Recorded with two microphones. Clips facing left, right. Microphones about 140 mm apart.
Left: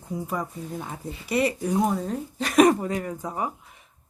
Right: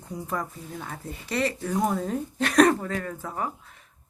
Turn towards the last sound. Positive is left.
turn(degrees=15)  # may be behind; listen again after turning